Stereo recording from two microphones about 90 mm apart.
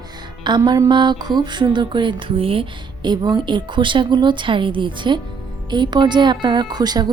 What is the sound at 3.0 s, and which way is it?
A woman's voice, 55° right (ahead or behind).